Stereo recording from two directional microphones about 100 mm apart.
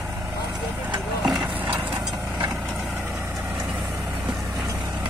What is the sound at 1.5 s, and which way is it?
Horse, 15° right (ahead or behind).